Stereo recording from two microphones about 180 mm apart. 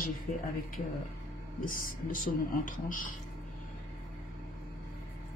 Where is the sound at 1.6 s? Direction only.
50° left (ahead or behind).